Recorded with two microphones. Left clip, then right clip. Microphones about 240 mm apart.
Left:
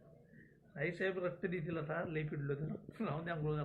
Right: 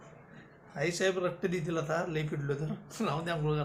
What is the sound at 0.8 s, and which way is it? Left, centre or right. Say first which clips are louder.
Speech: right 8 dB; centre.